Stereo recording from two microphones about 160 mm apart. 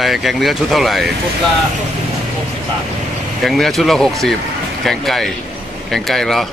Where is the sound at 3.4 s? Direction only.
Centre (ahead or behind).